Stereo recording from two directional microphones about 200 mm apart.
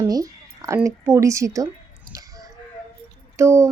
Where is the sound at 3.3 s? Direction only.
15° right (ahead or behind).